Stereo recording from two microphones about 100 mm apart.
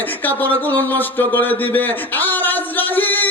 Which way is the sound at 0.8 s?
20° left (ahead or behind).